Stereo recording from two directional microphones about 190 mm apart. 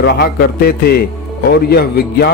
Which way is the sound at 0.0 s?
55° left (ahead or behind).